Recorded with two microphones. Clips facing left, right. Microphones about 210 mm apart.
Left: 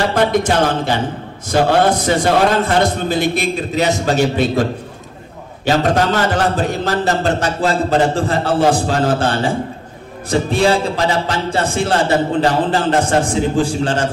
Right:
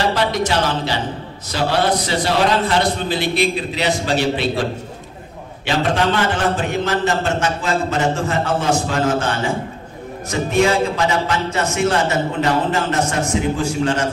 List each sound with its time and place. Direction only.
0.1 s a sound: 50° left (ahead or behind)
0.5 s a man's voice: 50° left (ahead or behind)
5.7 s a man's voice: 40° left (ahead or behind)